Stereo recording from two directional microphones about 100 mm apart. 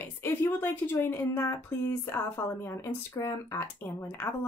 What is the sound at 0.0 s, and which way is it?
A woman's voice, 25° left (ahead or behind).